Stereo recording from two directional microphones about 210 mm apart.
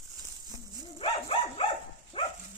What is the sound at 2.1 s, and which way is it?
Dog, 25° left (ahead or behind).